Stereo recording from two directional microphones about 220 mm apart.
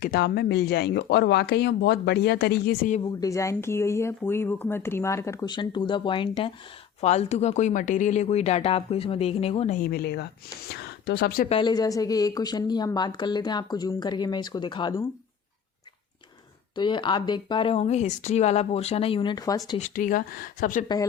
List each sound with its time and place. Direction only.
0.0 s speech: 45° left (ahead or behind)
3.0 s speech: 15° left (ahead or behind); by 11.4 s 45° left (ahead or behind)
11.4 s a woman's voice: 20° left (ahead or behind)
16.7 s a woman's voice: 20° left (ahead or behind)
19.8 s speech: 35° left (ahead or behind)
20.8 s a woman's voice: 20° left (ahead or behind)